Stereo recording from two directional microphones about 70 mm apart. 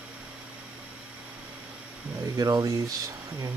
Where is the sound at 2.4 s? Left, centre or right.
Right.